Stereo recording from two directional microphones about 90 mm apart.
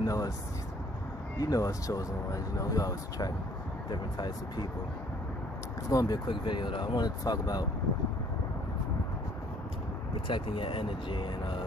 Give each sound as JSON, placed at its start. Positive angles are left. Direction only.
{"t": 0.0, "sound": "a sound", "side_deg": 45}
{"t": 1.4, "sound": "speech", "side_deg": 40}
{"t": 3.9, "sound": "speech", "side_deg": 55}
{"t": 5.9, "sound": "speech", "side_deg": 45}
{"t": 10.2, "sound": "speech", "side_deg": 75}